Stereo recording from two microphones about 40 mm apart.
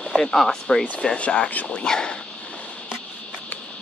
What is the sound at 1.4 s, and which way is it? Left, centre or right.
Speech, left.